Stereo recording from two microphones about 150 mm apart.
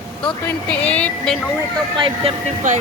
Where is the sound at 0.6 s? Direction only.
10° left (ahead or behind).